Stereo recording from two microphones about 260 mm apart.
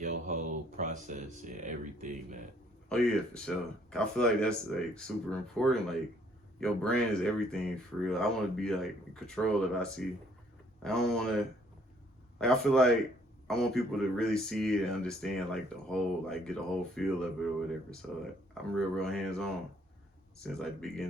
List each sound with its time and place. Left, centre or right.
0.0 s speech: right
2.9 s speech: centre
12.4 s speech: centre
18.5 s speech: centre